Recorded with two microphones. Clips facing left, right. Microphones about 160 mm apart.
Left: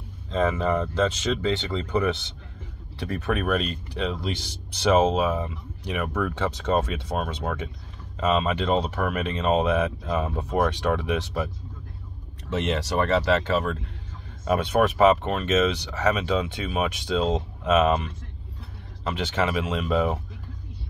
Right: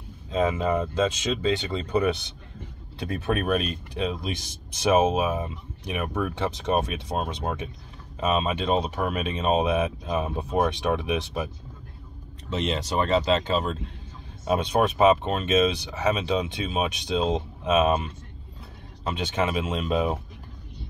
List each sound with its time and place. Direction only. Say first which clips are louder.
0.3 s speech: even; 15° right (ahead or behind)
12.6 s speech: left 1 dB; 20° right (ahead or behind)
19.0 s speech: left 1 dB; 20° right (ahead or behind)